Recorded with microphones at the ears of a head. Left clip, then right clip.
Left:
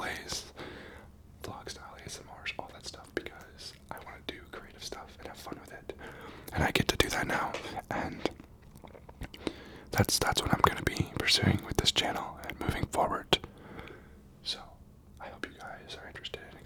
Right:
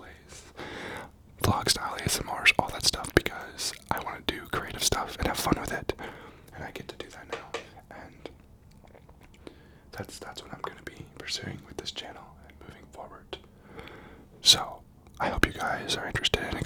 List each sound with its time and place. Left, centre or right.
0.0 s a sound: left
0.7 s whispering: right
6.5 s whispering: left
9.4 s whispering: left
14.4 s whispering: right